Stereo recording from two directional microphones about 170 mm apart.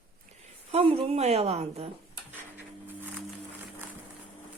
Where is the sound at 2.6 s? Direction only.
10° right (ahead or behind).